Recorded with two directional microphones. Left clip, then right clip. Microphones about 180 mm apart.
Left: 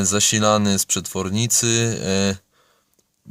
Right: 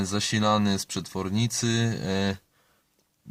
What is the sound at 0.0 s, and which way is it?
Speech, 45° left (ahead or behind).